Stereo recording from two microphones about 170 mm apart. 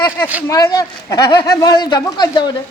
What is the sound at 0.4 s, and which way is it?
Speech, 20° left (ahead or behind).